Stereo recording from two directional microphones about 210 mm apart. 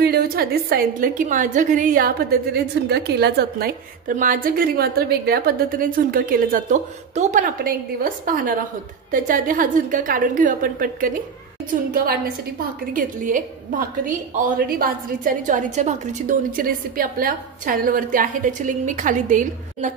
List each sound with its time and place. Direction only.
0.0 s a woman's voice: 45° right (ahead or behind)
12.9 s a woman's voice: 40° right (ahead or behind)